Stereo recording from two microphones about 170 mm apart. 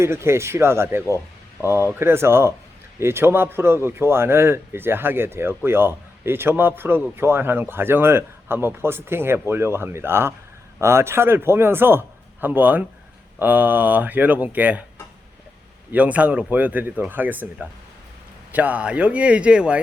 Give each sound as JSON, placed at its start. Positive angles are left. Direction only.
{"t": 0.0, "sound": "speech", "side_deg": -15}
{"t": 15.9, "sound": "speech", "side_deg": -10}